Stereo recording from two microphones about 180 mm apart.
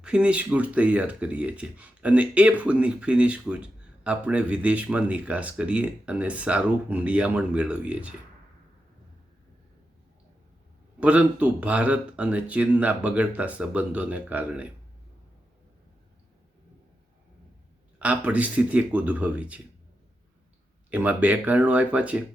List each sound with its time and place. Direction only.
0.0 s speech: 5° right (ahead or behind)
11.0 s speech: 5° right (ahead or behind)
18.0 s speech: 10° right (ahead or behind)
20.9 s speech: 10° right (ahead or behind)